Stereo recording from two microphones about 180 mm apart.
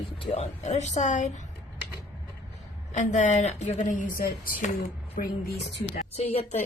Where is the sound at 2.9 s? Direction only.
40° left (ahead or behind).